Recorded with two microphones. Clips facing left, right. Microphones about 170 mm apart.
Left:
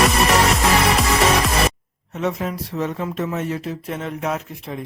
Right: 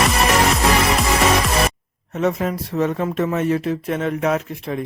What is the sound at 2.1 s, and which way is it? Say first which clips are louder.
Speech: right 3 dB; 50° right (ahead or behind).